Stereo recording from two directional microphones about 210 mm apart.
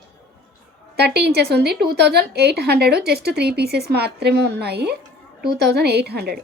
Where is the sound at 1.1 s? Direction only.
50° right (ahead or behind).